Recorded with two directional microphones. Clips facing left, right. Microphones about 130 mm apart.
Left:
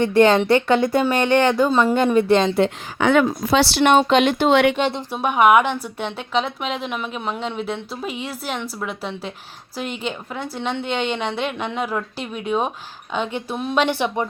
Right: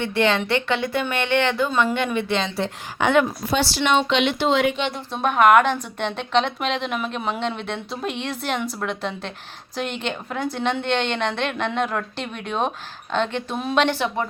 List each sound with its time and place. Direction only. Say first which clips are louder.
0.0 s speech: left 6 dB; 40° left (ahead or behind)
3.5 s speech: left 5 dB; 70° left (ahead or behind); by 4.9 s 45° left (ahead or behind)
5.1 s a woman's voice: even; 10° left (ahead or behind)